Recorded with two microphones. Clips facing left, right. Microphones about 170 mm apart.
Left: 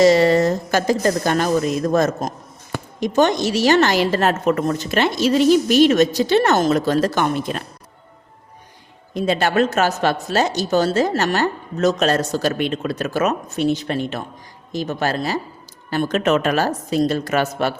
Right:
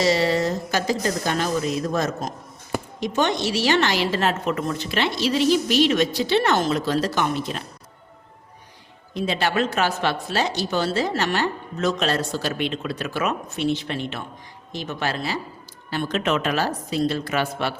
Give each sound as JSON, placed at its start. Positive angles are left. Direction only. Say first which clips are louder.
{"t": 0.0, "sound": "a woman's voice", "louder": "left 7 dB", "side_deg": 50}
{"t": 9.1, "sound": "a woman's voice", "louder": "left 5 dB", "side_deg": 45}